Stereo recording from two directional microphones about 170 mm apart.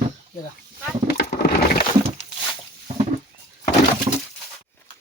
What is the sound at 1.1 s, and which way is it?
Wood, 70° left (ahead or behind).